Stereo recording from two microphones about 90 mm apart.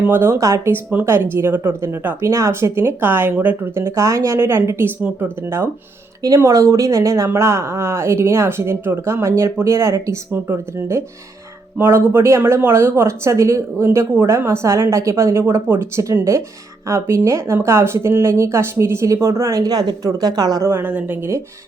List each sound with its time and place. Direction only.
0.0 s speech: 25° right (ahead or behind)
0.7 s speech: 20° right (ahead or behind); by 20.7 s 45° right (ahead or behind)
20.7 s speech: 25° right (ahead or behind)